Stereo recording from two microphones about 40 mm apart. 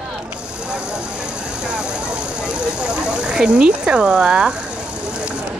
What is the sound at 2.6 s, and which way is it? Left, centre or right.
Speech, right.